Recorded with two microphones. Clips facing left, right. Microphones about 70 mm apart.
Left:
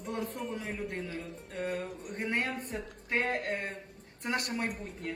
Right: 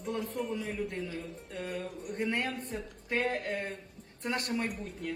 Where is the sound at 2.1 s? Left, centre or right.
Left.